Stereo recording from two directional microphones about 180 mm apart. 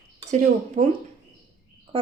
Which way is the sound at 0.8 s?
45° right (ahead or behind).